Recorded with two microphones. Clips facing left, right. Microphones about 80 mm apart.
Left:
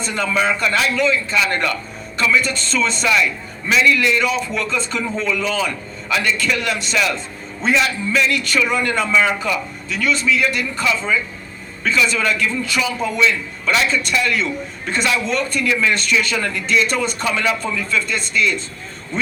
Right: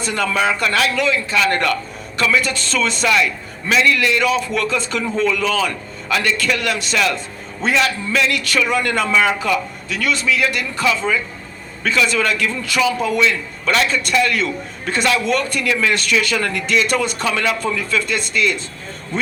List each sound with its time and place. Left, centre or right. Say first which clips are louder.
0.0 s a man's voice: right 1 dB; right